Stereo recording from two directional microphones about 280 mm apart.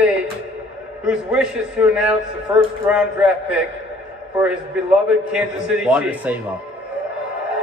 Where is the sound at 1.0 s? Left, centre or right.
Centre.